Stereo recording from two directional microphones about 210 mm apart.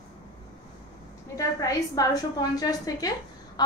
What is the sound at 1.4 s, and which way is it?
A woman's voice, 15° left (ahead or behind).